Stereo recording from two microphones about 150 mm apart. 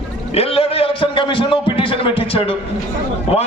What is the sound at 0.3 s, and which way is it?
A man's voice, 40° left (ahead or behind).